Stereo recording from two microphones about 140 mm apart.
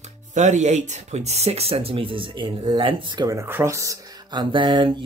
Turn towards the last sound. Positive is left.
turn(degrees=-35)  # may be behind; listen again after turning